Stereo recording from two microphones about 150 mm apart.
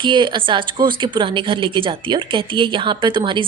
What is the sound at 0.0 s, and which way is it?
A woman's voice, 30° right (ahead or behind).